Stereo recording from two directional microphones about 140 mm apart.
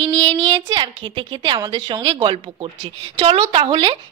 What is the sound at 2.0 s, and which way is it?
A woman's voice, 40° right (ahead or behind).